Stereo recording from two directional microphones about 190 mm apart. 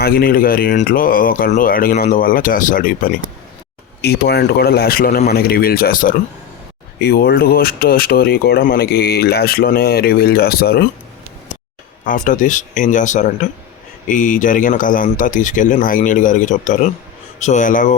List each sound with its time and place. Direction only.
0.0 s speech: 50° left (ahead or behind)
4.0 s speech: 55° left (ahead or behind)
12.0 s speech: 45° left (ahead or behind)